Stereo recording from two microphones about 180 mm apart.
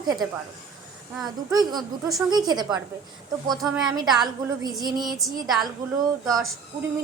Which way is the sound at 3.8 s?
20° right (ahead or behind).